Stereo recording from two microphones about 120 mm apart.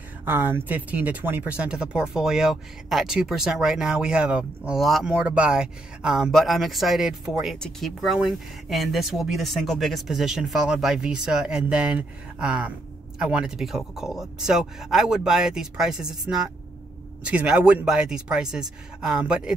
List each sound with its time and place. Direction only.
0.2 s speech: 15° right (ahead or behind)
17.2 s speech: 10° right (ahead or behind)